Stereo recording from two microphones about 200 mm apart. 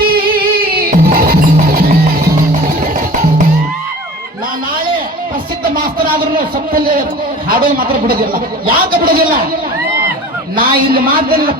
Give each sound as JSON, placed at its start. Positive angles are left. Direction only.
{"t": 0.0, "sound": "music", "side_deg": -50}
{"t": 2.9, "sound": "music", "side_deg": -40}
{"t": 5.6, "sound": "a man's voice", "side_deg": -45}
{"t": 10.6, "sound": "a man's voice", "side_deg": -45}